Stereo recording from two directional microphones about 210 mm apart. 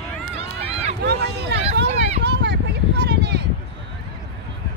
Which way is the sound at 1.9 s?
30° right (ahead or behind).